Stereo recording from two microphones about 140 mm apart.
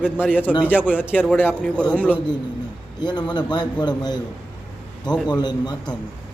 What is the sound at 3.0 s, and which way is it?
A man's voice, 30° left (ahead or behind).